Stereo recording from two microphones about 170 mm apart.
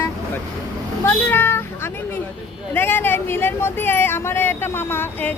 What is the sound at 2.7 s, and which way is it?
Speech, 10° left (ahead or behind).